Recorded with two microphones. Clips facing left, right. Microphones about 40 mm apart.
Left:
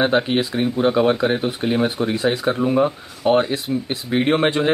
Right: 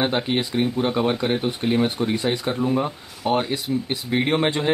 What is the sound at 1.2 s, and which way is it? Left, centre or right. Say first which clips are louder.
Speech: left 3 dB; centre.